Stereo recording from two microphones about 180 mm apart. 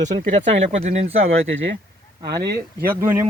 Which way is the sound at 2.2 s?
65° right (ahead or behind).